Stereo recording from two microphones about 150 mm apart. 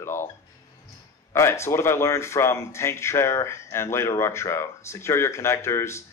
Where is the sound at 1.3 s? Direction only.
15° left (ahead or behind).